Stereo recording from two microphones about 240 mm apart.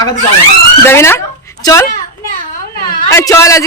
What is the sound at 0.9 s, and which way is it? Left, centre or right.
Speech, centre.